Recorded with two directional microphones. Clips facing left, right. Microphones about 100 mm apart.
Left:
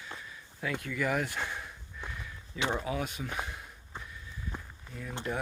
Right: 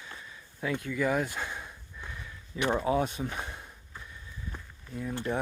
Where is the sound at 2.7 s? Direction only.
35° right (ahead or behind).